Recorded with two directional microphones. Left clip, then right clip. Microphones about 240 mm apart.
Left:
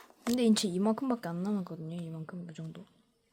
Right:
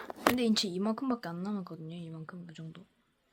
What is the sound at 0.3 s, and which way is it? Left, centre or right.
A woman's voice, centre.